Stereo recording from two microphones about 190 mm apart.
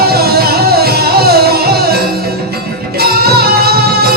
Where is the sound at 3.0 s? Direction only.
55° right (ahead or behind).